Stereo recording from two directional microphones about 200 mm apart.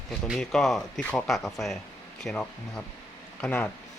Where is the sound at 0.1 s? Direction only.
Centre (ahead or behind).